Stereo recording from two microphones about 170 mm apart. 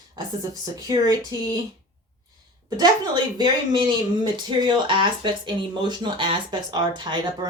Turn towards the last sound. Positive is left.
turn(degrees=-25)  # may be behind; listen again after turning